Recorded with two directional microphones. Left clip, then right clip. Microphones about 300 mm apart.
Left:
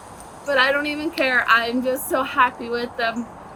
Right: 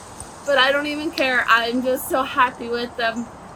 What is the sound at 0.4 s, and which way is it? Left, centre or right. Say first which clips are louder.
Speech: right 1 dB; centre.